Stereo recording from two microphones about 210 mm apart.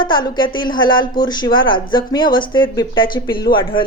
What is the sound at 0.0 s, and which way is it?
Speech, 20° left (ahead or behind).